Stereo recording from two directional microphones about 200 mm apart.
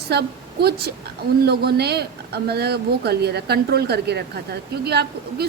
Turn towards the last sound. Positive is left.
turn(degrees=-55)  # may be behind; listen again after turning